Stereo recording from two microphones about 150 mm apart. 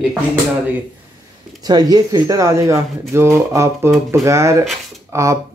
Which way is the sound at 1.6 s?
25° right (ahead or behind).